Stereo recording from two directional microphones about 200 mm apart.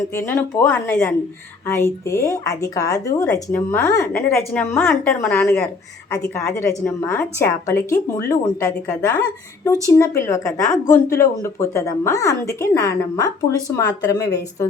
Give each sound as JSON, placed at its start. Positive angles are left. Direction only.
{"t": 0.1, "sound": "a woman's voice", "side_deg": 15}